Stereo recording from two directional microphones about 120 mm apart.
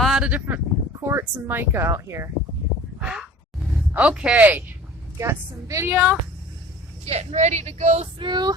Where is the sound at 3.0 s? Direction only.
5° right (ahead or behind).